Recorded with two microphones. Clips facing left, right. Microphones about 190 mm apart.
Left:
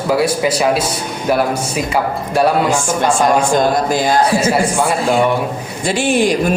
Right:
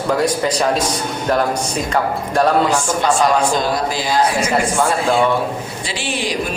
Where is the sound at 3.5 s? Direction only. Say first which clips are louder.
Left 5 dB; 50° left (ahead or behind).